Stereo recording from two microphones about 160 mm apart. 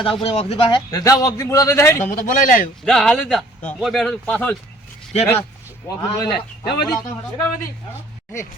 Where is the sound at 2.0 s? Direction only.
55° left (ahead or behind).